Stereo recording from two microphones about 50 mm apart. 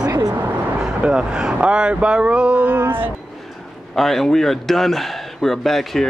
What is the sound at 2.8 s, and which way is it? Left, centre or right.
Speech, right.